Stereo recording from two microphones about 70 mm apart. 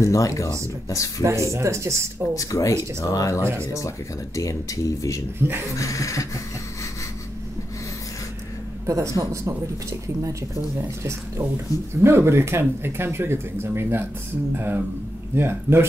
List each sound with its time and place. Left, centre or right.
0.0 s speech: left
1.2 s speech: right
2.3 s speech: left
8.8 s speech: right